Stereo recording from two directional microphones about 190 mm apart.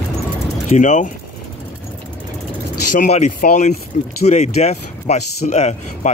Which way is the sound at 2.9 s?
40° left (ahead or behind).